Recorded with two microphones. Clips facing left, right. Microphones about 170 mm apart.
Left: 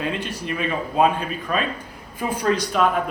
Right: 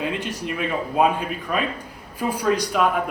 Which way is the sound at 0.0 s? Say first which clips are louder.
Even; 15° right (ahead or behind).